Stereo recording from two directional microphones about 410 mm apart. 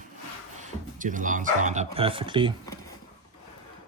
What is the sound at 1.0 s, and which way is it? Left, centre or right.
Speech, centre.